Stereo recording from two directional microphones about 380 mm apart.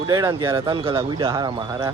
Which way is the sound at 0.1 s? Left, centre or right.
Centre.